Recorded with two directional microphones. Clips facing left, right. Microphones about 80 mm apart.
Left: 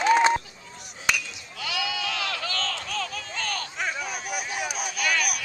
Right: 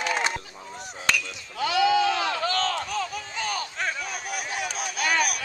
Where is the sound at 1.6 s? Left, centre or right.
Right.